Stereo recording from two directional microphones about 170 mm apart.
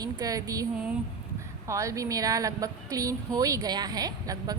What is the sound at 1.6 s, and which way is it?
A woman's voice, 20° right (ahead or behind).